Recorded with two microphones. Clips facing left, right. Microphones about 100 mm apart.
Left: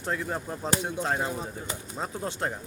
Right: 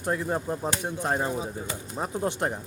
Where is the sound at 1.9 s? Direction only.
15° right (ahead or behind).